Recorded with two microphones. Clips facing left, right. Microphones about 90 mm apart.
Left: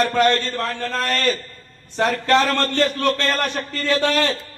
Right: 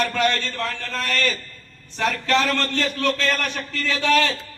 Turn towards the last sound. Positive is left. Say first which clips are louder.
# left 1 dB
turn(degrees=40)  # may be behind; listen again after turning